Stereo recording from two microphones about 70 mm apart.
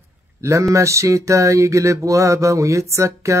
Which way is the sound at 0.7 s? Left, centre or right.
Right.